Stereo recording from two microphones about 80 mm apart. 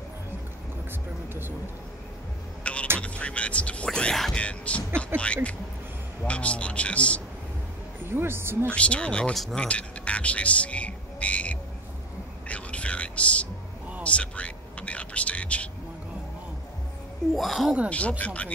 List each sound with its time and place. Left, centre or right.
2.6 s vehicle: centre
3.0 s a man's voice: centre
8.0 s speech: right
8.6 s a man's voice: centre
9.7 s music: centre
12.4 s a sound: centre
17.4 s speech: centre
17.8 s a man's voice: centre